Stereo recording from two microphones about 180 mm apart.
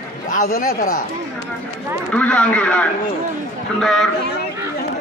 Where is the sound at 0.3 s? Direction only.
45° left (ahead or behind).